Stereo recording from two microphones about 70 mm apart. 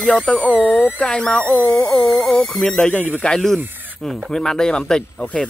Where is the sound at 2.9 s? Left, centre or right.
Left.